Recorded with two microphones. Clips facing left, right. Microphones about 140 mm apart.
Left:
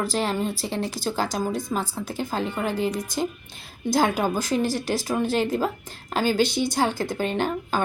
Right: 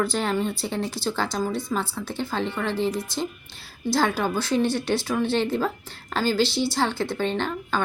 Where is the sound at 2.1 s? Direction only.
40° left (ahead or behind).